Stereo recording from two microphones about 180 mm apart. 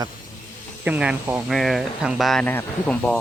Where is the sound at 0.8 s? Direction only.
5° right (ahead or behind).